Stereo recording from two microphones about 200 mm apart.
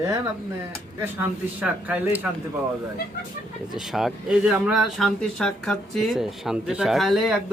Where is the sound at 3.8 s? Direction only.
Centre (ahead or behind).